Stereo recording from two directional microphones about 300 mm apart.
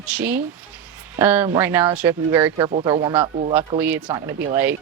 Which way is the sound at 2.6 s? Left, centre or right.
Centre.